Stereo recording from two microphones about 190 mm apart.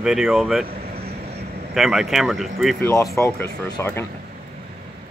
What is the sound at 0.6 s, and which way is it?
Vehicle, 55° right (ahead or behind).